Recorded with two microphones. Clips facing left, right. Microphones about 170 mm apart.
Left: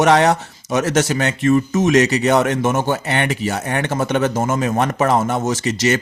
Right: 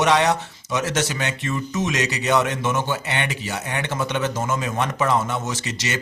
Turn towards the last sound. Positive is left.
turn(degrees=45)  # may be behind; listen again after turning